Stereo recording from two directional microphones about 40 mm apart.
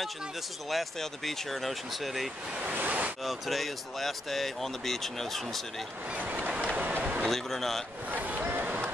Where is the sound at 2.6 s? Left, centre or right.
Right.